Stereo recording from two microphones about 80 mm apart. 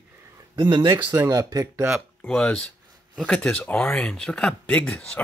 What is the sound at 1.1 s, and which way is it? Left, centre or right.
Speech, right.